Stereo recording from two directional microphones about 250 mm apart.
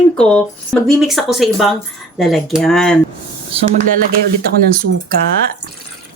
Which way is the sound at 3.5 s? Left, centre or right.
Right.